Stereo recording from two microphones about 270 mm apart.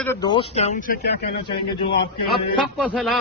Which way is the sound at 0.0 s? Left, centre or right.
Centre.